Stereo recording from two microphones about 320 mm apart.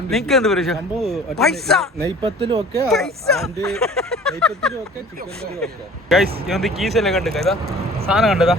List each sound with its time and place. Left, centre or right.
0.1 s speech: centre
2.2 s speech: centre
2.7 s speech: centre